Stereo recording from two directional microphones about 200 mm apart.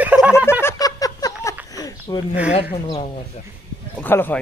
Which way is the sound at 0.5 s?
10° left (ahead or behind).